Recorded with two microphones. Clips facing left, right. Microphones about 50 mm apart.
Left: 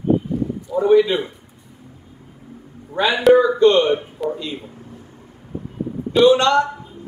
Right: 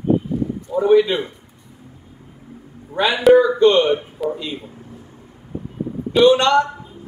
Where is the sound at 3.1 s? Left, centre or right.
Centre.